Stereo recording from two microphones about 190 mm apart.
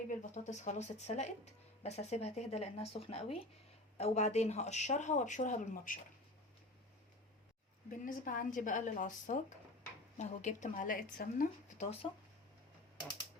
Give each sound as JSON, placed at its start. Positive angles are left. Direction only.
{"t": 0.1, "sound": "speech", "side_deg": 40}
{"t": 7.9, "sound": "speech", "side_deg": 45}